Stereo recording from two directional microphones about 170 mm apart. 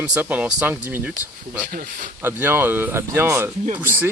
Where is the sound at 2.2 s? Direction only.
10° right (ahead or behind).